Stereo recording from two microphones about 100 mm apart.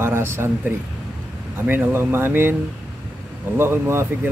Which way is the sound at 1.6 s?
20° right (ahead or behind).